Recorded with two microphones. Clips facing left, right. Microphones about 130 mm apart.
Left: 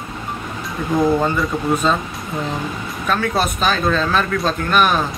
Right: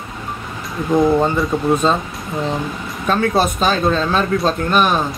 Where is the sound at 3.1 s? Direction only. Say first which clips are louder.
Right 3 dB; 30° right (ahead or behind).